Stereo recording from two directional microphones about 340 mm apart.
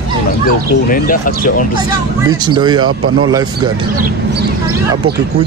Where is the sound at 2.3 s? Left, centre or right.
Centre.